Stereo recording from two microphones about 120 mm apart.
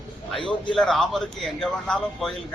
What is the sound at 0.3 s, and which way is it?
Speech, 45° left (ahead or behind).